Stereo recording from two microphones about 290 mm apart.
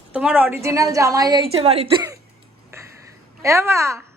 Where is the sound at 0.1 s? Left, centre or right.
Centre.